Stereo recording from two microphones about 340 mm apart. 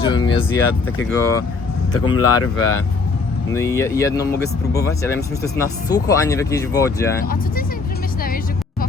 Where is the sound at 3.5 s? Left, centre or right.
Centre.